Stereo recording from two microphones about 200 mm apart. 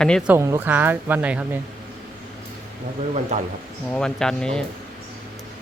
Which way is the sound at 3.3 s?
35° right (ahead or behind).